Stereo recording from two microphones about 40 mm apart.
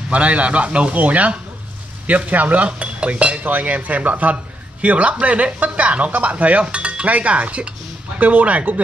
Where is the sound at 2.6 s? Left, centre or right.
Right.